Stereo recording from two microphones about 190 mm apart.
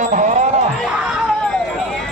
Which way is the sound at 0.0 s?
40° right (ahead or behind).